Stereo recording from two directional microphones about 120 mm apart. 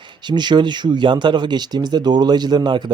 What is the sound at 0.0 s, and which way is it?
Speech, 40° right (ahead or behind).